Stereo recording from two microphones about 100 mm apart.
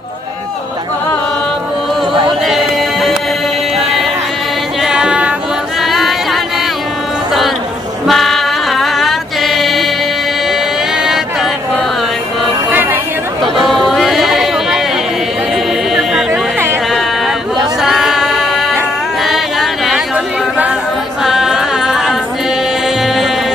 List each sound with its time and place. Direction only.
2.4 s music: centre (ahead or behind)
4.8 s music: 10° right (ahead or behind)
5.8 s singing: centre (ahead or behind)
8.1 s music: centre (ahead or behind)
13.6 s a sound: centre (ahead or behind)
15.9 s music: 5° right (ahead or behind)
16.3 s a sound: 25° right (ahead or behind)
17.8 s music: centre (ahead or behind)
19.2 s a sound: centre (ahead or behind)
21.2 s music: 5° right (ahead or behind)